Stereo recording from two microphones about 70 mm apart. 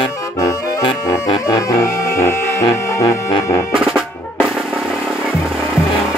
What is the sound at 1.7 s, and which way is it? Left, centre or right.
Music, left.